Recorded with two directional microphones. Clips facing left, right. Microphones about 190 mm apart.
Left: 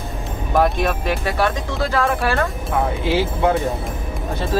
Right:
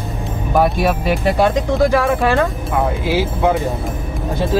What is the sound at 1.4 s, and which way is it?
Speech, 15° right (ahead or behind).